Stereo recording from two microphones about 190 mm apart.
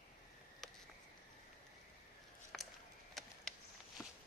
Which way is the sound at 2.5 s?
Centre (ahead or behind).